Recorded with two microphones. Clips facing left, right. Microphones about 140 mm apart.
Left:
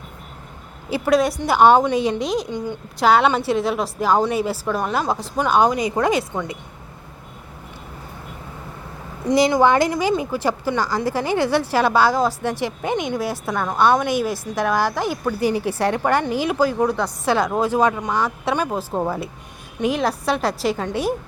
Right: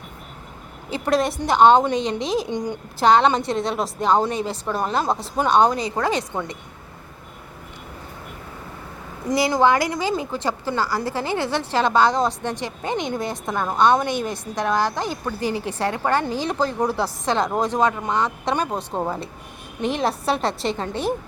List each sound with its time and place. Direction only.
0.9 s a woman's voice: 10° left (ahead or behind)
2.5 s a woman's voice: 15° right (ahead or behind)
3.0 s a woman's voice: 5° left (ahead or behind)
9.6 s a woman's voice: 20° left (ahead or behind)
14.3 s a woman's voice: 20° right (ahead or behind)
14.9 s a woman's voice: 10° left (ahead or behind)
16.8 s a woman's voice: 5° right (ahead or behind)
17.2 s a woman's voice: 5° left (ahead or behind)